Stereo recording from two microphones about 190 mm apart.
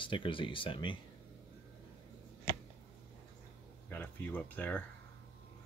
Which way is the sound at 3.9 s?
10° left (ahead or behind).